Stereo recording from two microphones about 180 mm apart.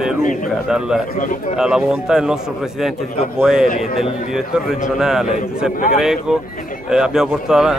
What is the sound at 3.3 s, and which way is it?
Speech, 5° right (ahead or behind).